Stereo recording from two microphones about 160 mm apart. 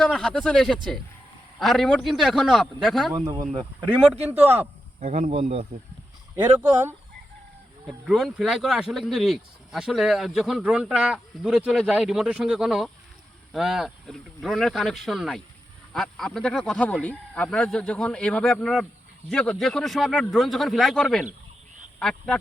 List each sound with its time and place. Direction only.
0.0 s speech: 5° left (ahead or behind)
3.5 s speech: 35° right (ahead or behind)
3.8 s speech: 10° right (ahead or behind)
4.9 s speech: 50° right (ahead or behind)
8.0 s speech: centre (ahead or behind)